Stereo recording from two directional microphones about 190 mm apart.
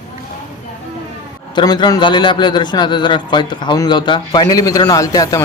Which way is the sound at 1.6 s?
20° left (ahead or behind).